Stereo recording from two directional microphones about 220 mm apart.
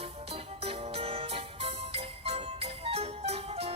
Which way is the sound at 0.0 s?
25° right (ahead or behind).